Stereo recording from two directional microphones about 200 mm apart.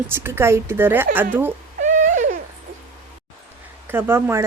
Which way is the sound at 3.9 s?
10° right (ahead or behind).